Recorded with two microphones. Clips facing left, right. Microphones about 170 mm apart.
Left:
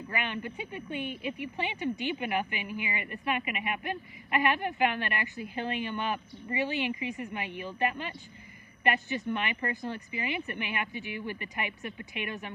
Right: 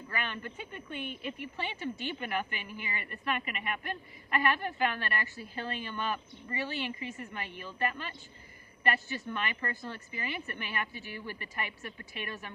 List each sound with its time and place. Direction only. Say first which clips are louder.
0.1 s speech: left 3 dB; 15° left (ahead or behind)